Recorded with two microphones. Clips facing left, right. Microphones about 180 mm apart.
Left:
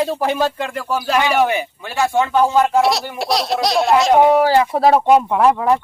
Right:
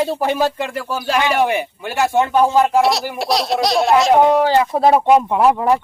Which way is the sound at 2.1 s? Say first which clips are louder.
Right 1 dB; 15° right (ahead or behind).